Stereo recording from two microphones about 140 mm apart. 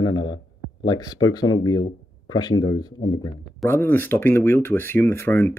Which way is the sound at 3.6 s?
15° left (ahead or behind).